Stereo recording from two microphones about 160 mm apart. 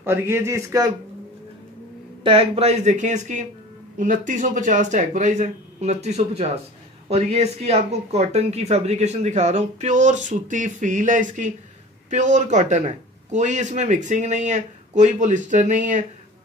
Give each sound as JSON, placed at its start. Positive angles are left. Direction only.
{"t": 0.0, "sound": "speech", "side_deg": -15}
{"t": 2.2, "sound": "speech", "side_deg": -35}